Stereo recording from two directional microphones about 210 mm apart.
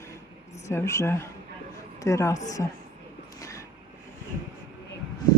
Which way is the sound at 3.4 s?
15° left (ahead or behind).